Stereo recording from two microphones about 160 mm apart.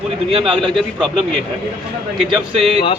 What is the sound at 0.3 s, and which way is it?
Speech, 35° right (ahead or behind).